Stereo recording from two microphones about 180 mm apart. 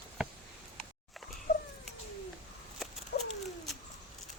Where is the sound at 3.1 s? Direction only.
60° left (ahead or behind).